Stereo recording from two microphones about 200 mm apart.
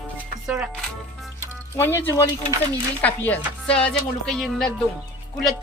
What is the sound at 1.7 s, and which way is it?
Speech, 10° left (ahead or behind).